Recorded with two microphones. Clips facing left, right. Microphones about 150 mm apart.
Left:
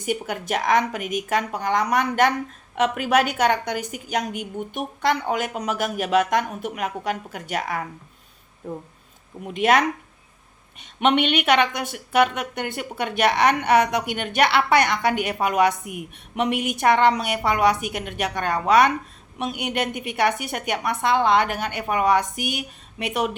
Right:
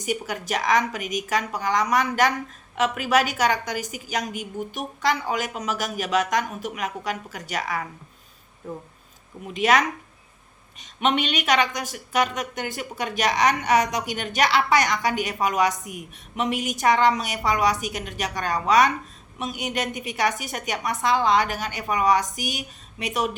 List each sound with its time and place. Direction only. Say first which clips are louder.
0.0 s a woman's voice: left 2 dB; 55° left (ahead or behind)
9.5 s a woman's voice: left 2 dB; 55° left (ahead or behind)